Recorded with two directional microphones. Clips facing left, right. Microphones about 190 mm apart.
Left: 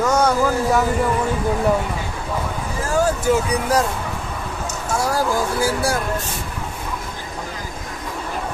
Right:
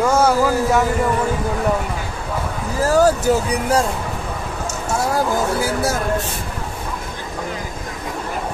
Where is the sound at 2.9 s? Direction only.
35° right (ahead or behind).